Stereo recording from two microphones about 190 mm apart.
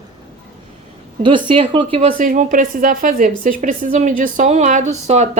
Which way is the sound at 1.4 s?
25° right (ahead or behind).